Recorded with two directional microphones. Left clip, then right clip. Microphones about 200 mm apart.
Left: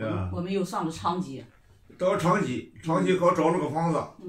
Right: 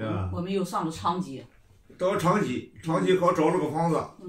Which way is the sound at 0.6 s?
15° left (ahead or behind).